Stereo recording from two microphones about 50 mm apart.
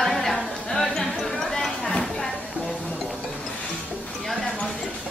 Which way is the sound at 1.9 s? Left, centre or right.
Left.